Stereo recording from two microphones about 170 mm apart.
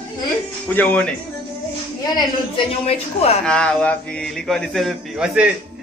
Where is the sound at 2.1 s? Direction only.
25° left (ahead or behind).